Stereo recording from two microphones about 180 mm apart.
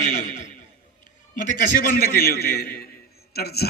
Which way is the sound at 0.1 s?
40° left (ahead or behind).